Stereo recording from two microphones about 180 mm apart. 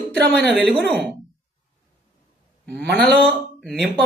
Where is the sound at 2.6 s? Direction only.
65° right (ahead or behind).